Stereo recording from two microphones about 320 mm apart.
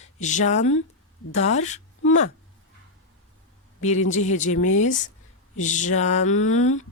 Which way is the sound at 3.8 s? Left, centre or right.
Left.